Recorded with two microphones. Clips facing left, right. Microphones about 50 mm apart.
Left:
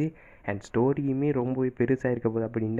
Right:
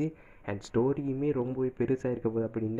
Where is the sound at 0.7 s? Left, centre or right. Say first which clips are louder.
Left 3 dB; left.